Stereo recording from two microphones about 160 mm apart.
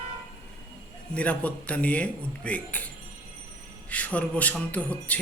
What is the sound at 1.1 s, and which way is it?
Speech, 10° left (ahead or behind).